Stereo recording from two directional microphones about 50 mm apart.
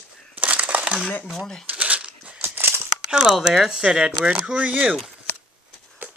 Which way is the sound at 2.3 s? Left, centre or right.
Right.